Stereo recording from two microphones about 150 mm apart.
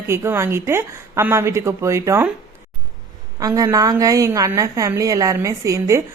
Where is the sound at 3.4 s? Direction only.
25° right (ahead or behind).